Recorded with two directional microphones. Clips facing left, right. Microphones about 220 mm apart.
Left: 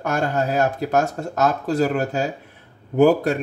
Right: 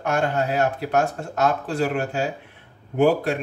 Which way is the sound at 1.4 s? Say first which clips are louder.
Left 3 dB; 40° left (ahead or behind).